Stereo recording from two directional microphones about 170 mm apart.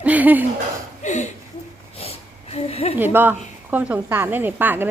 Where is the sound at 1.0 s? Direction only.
45° left (ahead or behind).